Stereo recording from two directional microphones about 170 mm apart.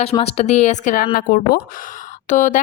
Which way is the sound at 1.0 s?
60° left (ahead or behind).